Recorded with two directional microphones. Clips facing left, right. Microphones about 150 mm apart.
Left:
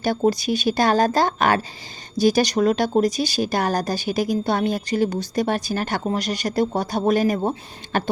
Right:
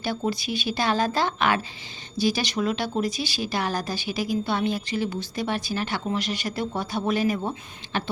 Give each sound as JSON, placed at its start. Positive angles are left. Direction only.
{"t": 0.0, "sound": "a woman's voice", "side_deg": 40}